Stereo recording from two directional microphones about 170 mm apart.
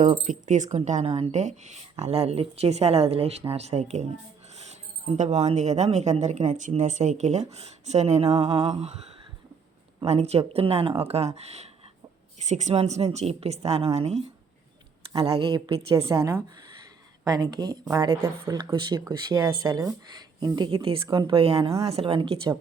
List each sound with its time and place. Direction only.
0.0 s speech: 45° right (ahead or behind)
10.0 s speech: 35° right (ahead or behind)